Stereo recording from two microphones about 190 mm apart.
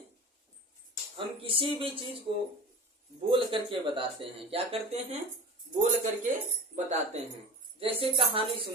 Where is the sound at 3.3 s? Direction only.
25° right (ahead or behind).